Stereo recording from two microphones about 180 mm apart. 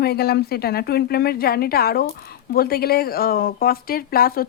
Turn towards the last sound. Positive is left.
turn(degrees=55)  # may be behind; listen again after turning